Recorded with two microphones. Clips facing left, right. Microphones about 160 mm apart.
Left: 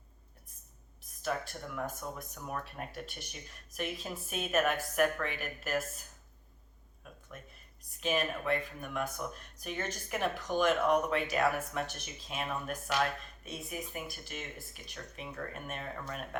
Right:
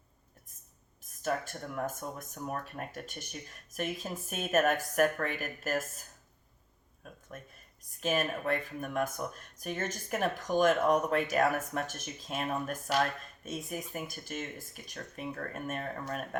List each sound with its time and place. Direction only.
1.2 s speech: 45° right (ahead or behind)
7.3 s speech: 45° right (ahead or behind)